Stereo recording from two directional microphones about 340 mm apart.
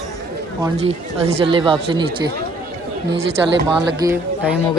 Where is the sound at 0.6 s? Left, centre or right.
Centre.